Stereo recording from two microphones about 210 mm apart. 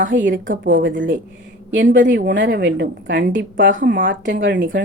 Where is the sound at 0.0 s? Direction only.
60° right (ahead or behind).